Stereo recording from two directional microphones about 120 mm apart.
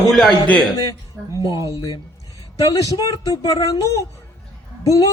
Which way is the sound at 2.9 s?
30° left (ahead or behind).